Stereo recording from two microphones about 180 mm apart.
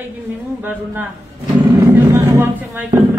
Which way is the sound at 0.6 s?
10° right (ahead or behind).